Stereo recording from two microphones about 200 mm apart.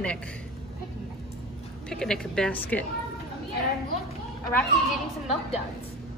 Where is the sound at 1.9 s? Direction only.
5° left (ahead or behind).